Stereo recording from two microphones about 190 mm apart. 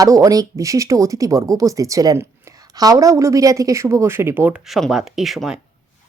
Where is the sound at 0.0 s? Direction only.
20° right (ahead or behind); by 5.5 s centre (ahead or behind).